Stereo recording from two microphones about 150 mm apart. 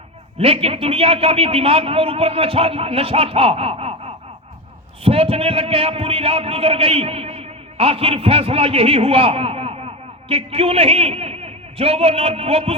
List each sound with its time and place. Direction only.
0.3 s a man's voice: 40° right (ahead or behind)